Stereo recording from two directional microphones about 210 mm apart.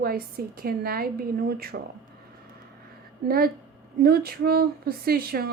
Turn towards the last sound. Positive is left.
turn(degrees=-45)  # may be behind; listen again after turning